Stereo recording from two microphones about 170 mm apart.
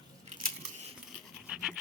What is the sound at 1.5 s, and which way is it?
Dog, 5° right (ahead or behind).